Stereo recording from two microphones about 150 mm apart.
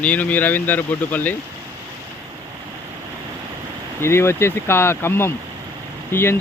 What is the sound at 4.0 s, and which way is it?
Speech, 15° left (ahead or behind).